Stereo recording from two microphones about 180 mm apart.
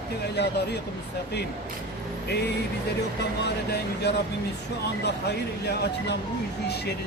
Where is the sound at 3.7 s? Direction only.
65° left (ahead or behind).